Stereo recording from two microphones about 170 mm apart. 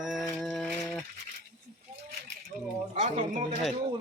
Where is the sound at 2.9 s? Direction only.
45° right (ahead or behind).